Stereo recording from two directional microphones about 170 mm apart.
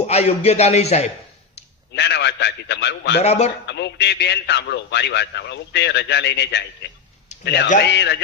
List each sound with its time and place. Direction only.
0.1 s a man's voice: 40° left (ahead or behind)
1.9 s a man's voice: 85° left
3.2 s a man's voice: 40° left (ahead or behind)
3.7 s a man's voice: 90° left